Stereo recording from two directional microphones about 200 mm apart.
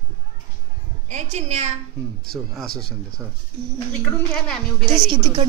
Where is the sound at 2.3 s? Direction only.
Centre (ahead or behind).